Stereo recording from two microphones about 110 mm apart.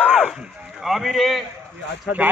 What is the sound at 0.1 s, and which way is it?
A man's voice, centre (ahead or behind).